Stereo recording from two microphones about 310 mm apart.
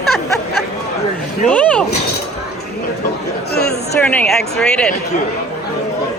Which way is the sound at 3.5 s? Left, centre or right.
Left.